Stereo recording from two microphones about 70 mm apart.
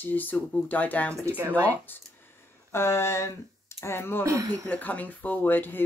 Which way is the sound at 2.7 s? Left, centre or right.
Left.